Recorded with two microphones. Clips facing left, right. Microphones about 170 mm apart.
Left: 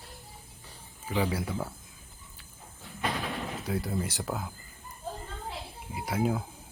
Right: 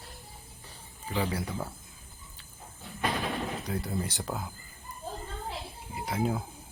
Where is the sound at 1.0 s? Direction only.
5° left (ahead or behind).